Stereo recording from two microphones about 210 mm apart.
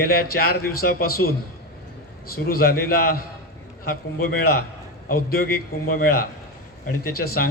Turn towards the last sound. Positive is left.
turn(degrees=45)  # may be behind; listen again after turning